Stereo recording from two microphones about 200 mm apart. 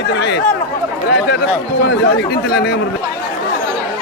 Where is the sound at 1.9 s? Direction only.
55° left (ahead or behind).